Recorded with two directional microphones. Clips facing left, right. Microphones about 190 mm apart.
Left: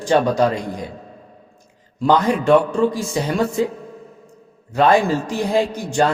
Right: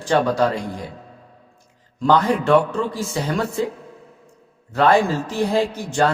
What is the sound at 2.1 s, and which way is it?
A man's voice, 15° left (ahead or behind).